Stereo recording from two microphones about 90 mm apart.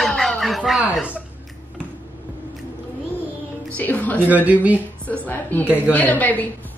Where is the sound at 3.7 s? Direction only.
20° left (ahead or behind).